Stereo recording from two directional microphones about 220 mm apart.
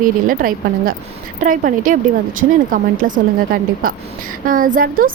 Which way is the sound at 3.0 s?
40° right (ahead or behind).